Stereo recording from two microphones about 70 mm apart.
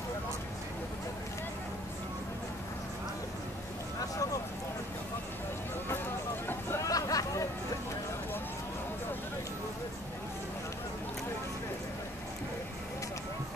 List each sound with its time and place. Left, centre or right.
4.0 s vehicle: left
6.8 s hubbub: left